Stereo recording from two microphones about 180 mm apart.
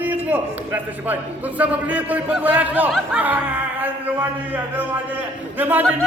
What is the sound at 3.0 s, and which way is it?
Speech, 5° right (ahead or behind).